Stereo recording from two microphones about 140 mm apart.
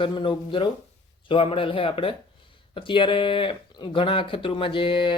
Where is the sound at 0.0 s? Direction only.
35° left (ahead or behind).